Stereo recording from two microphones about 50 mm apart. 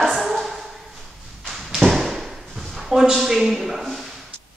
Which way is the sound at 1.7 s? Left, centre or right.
Centre.